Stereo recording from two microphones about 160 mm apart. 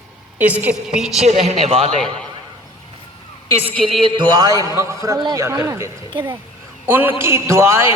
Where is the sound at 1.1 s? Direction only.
45° right (ahead or behind).